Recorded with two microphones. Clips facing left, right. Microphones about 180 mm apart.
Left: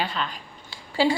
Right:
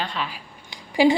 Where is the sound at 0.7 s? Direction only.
15° right (ahead or behind).